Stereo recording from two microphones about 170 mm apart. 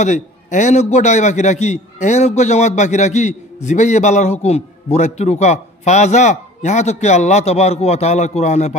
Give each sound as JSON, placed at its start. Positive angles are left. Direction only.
{"t": 0.0, "sound": "a man's voice", "side_deg": 45}